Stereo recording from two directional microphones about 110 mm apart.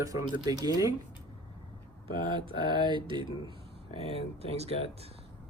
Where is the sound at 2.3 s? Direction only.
45° right (ahead or behind).